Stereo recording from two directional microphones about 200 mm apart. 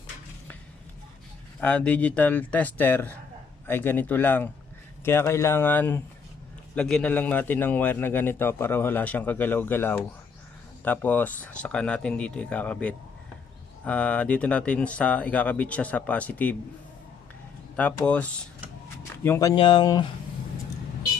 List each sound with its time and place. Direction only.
1.6 s a man's voice: 5° left (ahead or behind)
17.7 s a man's voice: 5° left (ahead or behind)